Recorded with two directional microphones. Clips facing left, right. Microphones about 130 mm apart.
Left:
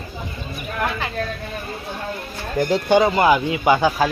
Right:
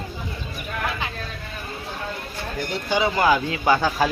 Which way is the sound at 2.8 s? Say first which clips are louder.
Left 6 dB; 55° left (ahead or behind).